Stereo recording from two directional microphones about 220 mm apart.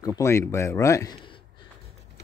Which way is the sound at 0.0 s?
15° left (ahead or behind).